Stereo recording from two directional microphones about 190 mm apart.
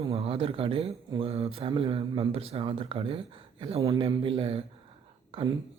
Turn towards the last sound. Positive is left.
turn(degrees=-30)  # may be behind; listen again after turning